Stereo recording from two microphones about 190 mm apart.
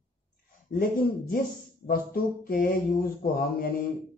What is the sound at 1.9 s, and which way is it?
Speech, 50° left (ahead or behind).